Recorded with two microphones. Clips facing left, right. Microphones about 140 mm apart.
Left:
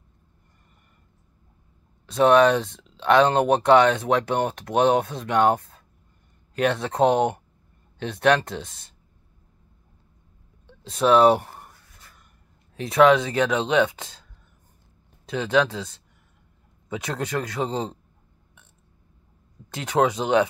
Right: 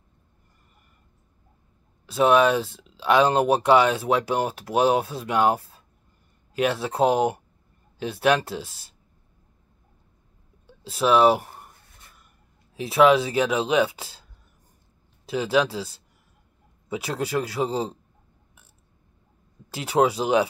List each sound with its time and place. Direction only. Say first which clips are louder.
2.0 s speech: left 2 dB; 5° right (ahead or behind)
10.7 s speech: left 2 dB; 5° right (ahead or behind)
12.7 s speech: left 1 dB; 5° right (ahead or behind)
15.2 s speech: even; 10° right (ahead or behind)
16.9 s speech: right 1 dB; 10° right (ahead or behind)
19.7 s speech: right 1 dB; 10° right (ahead or behind)